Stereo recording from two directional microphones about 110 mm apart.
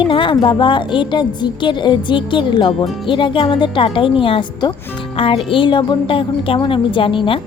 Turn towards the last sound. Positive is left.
turn(degrees=50)  # may be behind; listen again after turning